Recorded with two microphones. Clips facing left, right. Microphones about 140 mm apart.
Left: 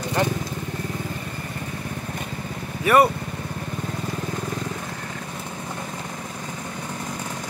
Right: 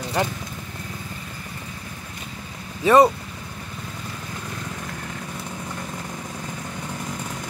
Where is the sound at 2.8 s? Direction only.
20° right (ahead or behind).